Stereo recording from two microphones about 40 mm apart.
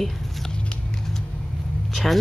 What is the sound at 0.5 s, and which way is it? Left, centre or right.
Vehicle, left.